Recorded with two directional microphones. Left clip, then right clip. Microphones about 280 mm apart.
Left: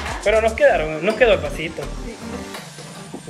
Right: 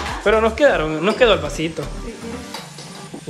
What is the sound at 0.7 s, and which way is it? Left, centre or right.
Speech, centre.